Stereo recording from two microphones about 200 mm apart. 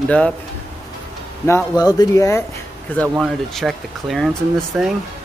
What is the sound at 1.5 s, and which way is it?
Speech, 15° left (ahead or behind).